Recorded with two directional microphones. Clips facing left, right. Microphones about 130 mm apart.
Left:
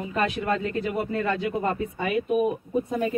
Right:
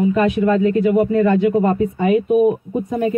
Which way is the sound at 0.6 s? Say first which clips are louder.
Right 12 dB; 25° right (ahead or behind).